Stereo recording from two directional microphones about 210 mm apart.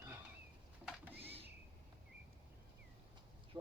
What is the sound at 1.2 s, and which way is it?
Printer, 30° right (ahead or behind).